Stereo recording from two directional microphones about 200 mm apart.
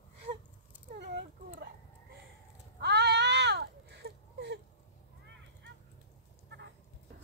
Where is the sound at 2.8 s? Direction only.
55° right (ahead or behind).